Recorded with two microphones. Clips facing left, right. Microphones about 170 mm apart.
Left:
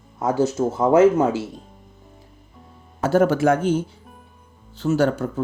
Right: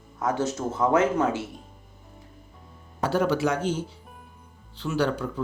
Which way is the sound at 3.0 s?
45° left (ahead or behind).